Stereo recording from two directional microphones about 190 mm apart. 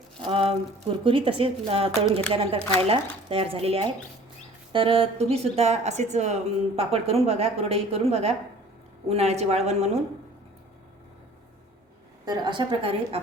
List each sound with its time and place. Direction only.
0.2 s speech: 30° right (ahead or behind)
12.2 s a woman's voice: 20° right (ahead or behind)